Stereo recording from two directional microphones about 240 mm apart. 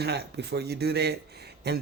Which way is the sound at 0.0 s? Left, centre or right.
Right.